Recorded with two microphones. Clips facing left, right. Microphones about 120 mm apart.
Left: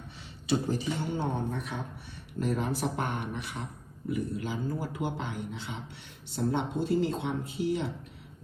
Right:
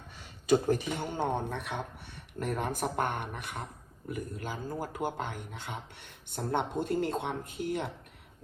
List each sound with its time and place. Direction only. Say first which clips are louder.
0.4 s a man's voice: right 3 dB; 50° right (ahead or behind)